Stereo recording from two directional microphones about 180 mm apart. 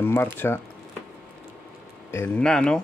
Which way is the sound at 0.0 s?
10° left (ahead or behind).